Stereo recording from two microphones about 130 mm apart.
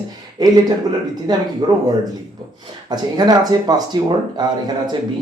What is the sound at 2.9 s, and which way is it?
Speech, 30° right (ahead or behind).